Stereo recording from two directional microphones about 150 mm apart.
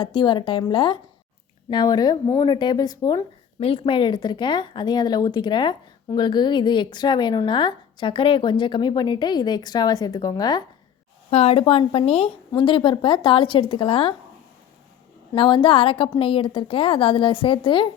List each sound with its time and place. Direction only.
0.0 s speech: 30° left (ahead or behind)
3.6 s speech: 40° left (ahead or behind)
11.3 s speech: 40° left (ahead or behind)
15.4 s speech: 35° left (ahead or behind)